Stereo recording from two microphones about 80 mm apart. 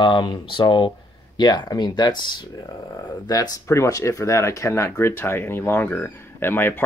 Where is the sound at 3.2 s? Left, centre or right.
Left.